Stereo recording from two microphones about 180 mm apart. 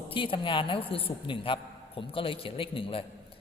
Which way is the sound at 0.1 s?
30° left (ahead or behind).